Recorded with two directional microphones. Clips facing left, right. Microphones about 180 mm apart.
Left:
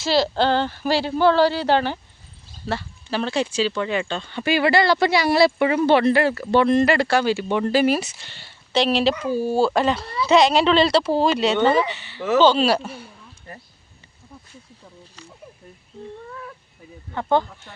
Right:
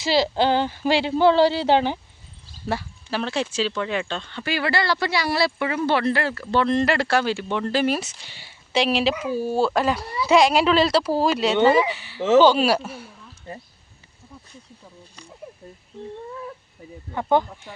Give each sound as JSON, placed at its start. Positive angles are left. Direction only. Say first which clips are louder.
{"t": 0.0, "sound": "speech", "louder": "left 1 dB", "side_deg": -15}
{"t": 2.6, "sound": "speech", "louder": "even", "side_deg": -5}
{"t": 4.4, "sound": "speech", "louder": "left 6 dB", "side_deg": 20}
{"t": 6.8, "sound": "speech", "louder": "left 3 dB", "side_deg": 0}
{"t": 7.4, "sound": "speech", "louder": "left 4 dB", "side_deg": 10}
{"t": 8.2, "sound": "speech", "louder": "left 1 dB", "side_deg": -10}
{"t": 17.1, "sound": "speech", "louder": "even", "side_deg": -10}